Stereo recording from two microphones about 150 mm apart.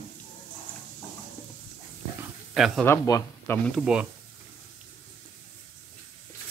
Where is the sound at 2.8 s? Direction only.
20° left (ahead or behind).